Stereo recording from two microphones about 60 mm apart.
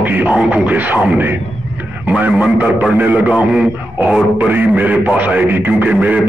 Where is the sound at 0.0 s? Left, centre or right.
Right.